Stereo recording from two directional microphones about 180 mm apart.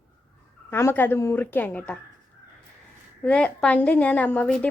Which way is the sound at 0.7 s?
10° left (ahead or behind).